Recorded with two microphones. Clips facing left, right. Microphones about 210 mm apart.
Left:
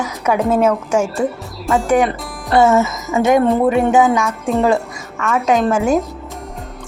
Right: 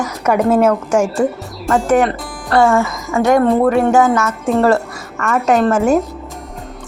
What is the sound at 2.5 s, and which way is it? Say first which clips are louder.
Speech: even; 20° left (ahead or behind).